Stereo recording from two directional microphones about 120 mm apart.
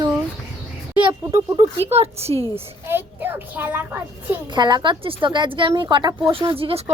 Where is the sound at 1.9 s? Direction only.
60° right (ahead or behind).